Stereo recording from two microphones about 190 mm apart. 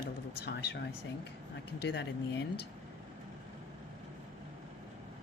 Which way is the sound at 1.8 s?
65° left (ahead or behind).